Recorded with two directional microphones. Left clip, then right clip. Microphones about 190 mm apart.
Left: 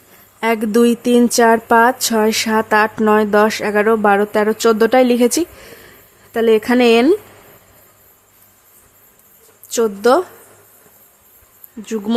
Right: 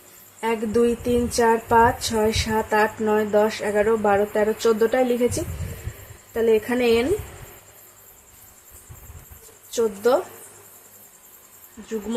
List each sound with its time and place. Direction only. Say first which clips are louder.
0.3 s speech: left 7 dB; 40° left (ahead or behind)
6.3 s speech: left 7 dB; 45° left (ahead or behind)
9.7 s speech: left 6 dB; 50° left (ahead or behind)